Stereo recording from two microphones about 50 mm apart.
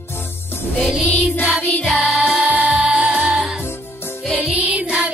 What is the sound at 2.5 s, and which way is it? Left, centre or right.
Music, right.